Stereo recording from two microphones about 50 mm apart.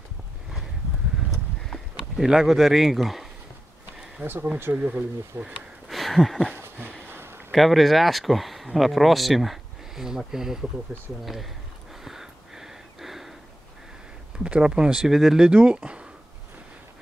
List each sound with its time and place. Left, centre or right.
1.3 s a sound: centre
2.2 s speech: centre
4.2 s speech: right
4.7 s speech: right
5.3 s speech: right
5.9 s a sound: centre
6.5 s a sound: right
7.5 s speech: centre
12.0 s a sound: centre
14.4 s speech: centre
15.0 s speech: centre
15.5 s speech: right